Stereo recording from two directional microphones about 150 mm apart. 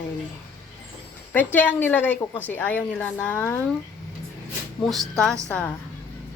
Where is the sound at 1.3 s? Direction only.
10° left (ahead or behind).